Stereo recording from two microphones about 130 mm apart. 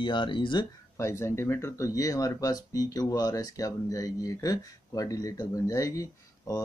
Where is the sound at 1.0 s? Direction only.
20° left (ahead or behind).